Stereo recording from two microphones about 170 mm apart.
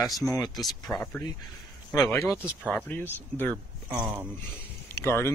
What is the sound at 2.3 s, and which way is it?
Speech, 5° right (ahead or behind).